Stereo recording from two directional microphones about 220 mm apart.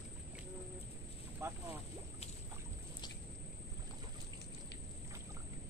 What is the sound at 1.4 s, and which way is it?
Speech, 15° right (ahead or behind).